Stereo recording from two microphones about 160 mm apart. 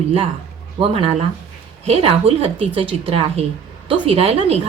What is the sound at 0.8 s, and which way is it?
Speech, 35° right (ahead or behind).